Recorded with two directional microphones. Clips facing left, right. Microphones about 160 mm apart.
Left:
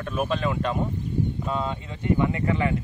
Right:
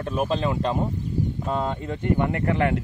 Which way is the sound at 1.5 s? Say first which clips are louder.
Right 3 dB; 45° right (ahead or behind).